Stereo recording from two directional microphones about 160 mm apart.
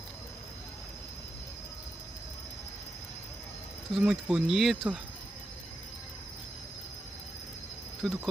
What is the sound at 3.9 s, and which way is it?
Speech, 5° right (ahead or behind).